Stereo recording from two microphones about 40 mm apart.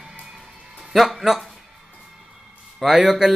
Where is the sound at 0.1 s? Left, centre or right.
Centre.